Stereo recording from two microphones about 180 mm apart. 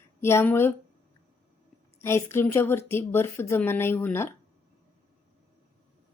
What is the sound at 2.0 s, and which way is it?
Speech, 15° left (ahead or behind).